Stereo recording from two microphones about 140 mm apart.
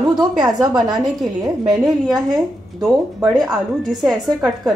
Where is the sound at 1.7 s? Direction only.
Centre (ahead or behind).